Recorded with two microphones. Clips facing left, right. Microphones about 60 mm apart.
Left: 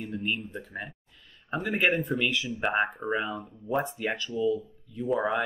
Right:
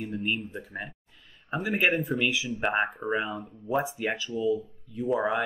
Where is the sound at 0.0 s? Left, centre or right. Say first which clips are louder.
Right 1 dB; centre.